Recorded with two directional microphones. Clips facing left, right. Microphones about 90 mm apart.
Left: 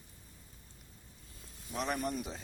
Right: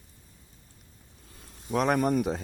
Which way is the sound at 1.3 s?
65° right (ahead or behind).